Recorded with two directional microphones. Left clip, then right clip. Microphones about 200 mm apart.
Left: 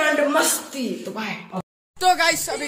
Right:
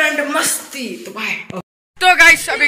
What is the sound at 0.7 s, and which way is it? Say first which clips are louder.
A woman's voice: right 2 dB; 15° left (ahead or behind).